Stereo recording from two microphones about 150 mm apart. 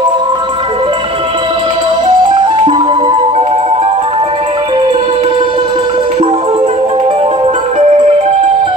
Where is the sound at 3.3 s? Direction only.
40° right (ahead or behind).